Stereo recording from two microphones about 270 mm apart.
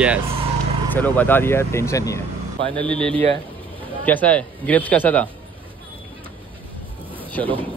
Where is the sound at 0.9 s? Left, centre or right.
Centre.